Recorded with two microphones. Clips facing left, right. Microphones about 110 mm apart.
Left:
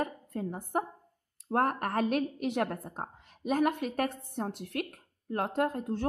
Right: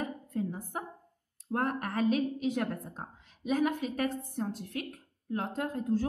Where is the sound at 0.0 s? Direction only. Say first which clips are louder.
Even; 55° left (ahead or behind).